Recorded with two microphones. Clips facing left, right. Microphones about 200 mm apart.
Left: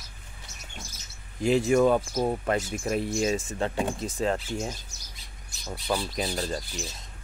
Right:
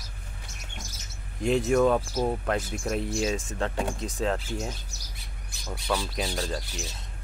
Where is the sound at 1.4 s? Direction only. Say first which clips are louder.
Left 1 dB; centre (ahead or behind).